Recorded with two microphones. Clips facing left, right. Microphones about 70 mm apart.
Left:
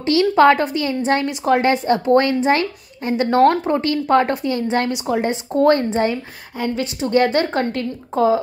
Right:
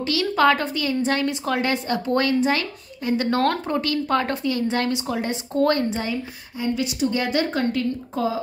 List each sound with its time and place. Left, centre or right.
0.0 s a woman's voice: left